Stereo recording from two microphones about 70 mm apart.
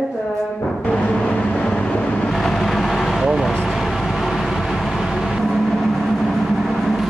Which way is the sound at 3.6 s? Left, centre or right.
Centre.